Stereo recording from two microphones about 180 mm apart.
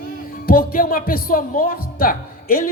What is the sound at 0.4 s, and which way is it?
Speech, 55° left (ahead or behind).